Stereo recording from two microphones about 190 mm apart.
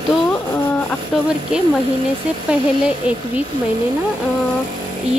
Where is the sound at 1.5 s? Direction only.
5° right (ahead or behind).